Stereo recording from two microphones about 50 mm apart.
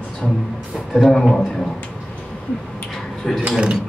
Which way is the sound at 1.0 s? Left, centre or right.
Centre.